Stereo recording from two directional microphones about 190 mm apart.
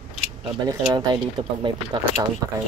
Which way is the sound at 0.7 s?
20° right (ahead or behind).